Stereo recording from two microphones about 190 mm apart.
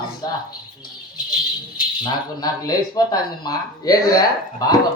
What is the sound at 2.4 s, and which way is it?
A man's voice, 20° left (ahead or behind).